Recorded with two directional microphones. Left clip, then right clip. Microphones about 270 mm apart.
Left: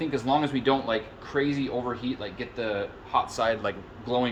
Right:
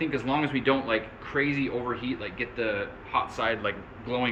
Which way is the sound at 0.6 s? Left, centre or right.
Left.